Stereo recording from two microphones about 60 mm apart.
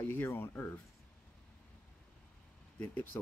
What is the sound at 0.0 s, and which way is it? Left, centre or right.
Speech, left.